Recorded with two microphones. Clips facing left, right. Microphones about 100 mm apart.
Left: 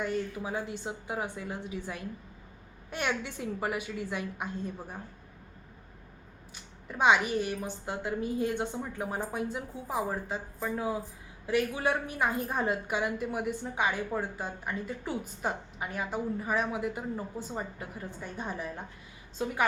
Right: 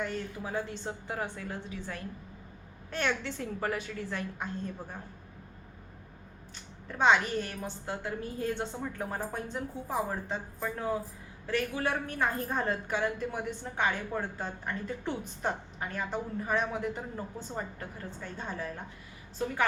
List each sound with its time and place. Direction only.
0.0 s a woman's voice: 15° left (ahead or behind)
6.8 s a woman's voice: 10° left (ahead or behind)